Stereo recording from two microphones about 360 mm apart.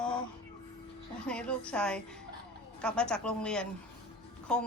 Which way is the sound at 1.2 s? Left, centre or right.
Centre.